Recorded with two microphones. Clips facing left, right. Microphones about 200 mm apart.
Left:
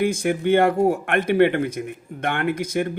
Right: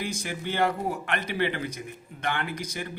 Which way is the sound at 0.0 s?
55° left (ahead or behind).